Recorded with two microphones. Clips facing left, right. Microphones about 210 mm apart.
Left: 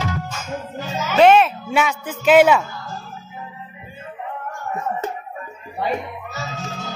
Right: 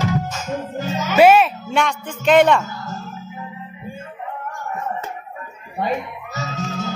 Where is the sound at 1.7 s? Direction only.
5° left (ahead or behind).